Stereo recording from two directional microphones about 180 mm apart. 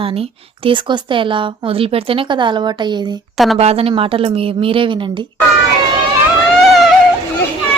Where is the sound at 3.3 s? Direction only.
Centre (ahead or behind).